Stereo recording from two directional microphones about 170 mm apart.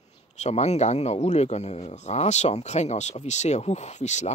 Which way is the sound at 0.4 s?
40° left (ahead or behind).